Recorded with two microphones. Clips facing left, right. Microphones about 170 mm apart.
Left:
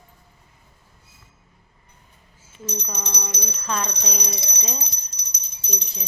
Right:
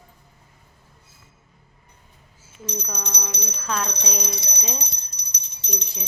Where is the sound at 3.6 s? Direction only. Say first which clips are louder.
Even; centre (ahead or behind).